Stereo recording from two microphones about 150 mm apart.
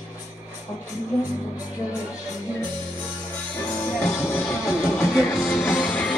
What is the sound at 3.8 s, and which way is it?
Music, 15° left (ahead or behind).